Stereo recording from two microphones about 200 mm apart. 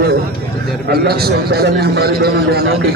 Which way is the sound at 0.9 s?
50° right (ahead or behind).